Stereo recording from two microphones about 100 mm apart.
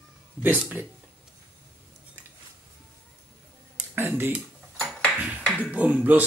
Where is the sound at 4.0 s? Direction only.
20° right (ahead or behind).